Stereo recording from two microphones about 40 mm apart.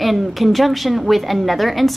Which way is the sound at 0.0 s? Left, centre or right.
Centre.